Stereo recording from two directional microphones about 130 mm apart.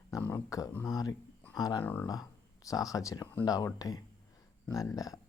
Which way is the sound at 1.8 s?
15° left (ahead or behind).